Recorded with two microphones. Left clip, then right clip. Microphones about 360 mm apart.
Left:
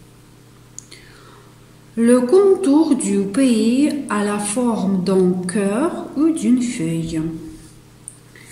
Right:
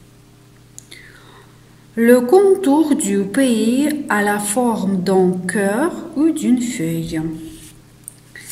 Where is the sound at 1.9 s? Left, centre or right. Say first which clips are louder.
Right 2 dB; right.